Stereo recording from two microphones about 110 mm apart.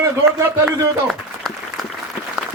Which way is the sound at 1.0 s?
Centre (ahead or behind).